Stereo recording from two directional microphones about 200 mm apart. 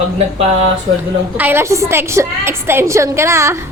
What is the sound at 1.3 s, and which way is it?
A woman's voice, 10° right (ahead or behind).